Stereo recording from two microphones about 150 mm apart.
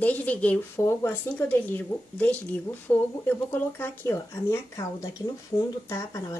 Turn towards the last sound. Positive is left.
turn(degrees=20)  # may be behind; listen again after turning